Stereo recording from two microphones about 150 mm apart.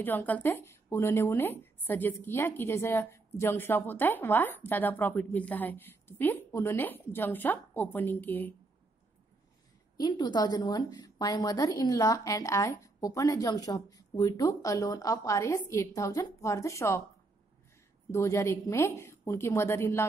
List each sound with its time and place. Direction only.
0.0 s a woman's voice: 10° left (ahead or behind)
9.9 s speech: 30° left (ahead or behind)
18.1 s speech: 20° left (ahead or behind)